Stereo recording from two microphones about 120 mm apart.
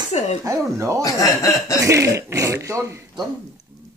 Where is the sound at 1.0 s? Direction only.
30° left (ahead or behind).